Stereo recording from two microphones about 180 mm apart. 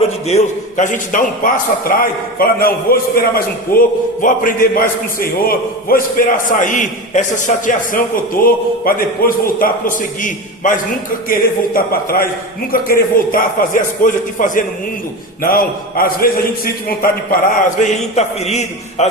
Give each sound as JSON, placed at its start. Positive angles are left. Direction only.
{"t": 0.3, "sound": "a man's voice", "side_deg": 40}
{"t": 17.6, "sound": "a man's voice", "side_deg": 45}